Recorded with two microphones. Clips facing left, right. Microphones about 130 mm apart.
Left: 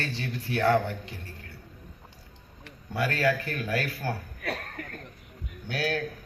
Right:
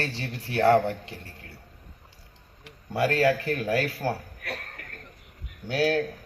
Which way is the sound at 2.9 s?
30° right (ahead or behind).